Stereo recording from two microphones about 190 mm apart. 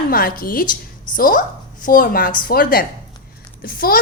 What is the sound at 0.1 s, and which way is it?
A woman's voice, 50° left (ahead or behind).